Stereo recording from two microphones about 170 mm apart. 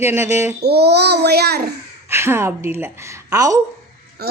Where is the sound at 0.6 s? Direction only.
75° right (ahead or behind).